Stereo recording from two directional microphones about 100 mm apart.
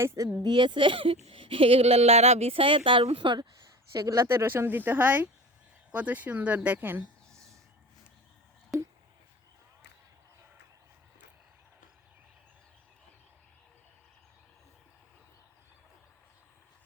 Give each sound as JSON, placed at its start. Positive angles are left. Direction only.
{"t": 0.0, "sound": "speech", "side_deg": -25}
{"t": 0.4, "sound": "speech", "side_deg": -55}
{"t": 3.9, "sound": "speech", "side_deg": -35}